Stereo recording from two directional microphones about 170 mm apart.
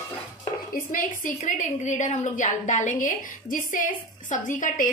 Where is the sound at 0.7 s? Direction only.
50° left (ahead or behind).